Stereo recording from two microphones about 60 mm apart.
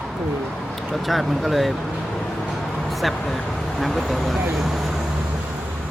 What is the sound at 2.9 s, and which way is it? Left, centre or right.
Speech, centre.